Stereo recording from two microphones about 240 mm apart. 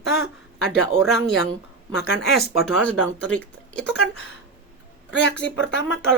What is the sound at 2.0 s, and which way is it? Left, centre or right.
Speech, left.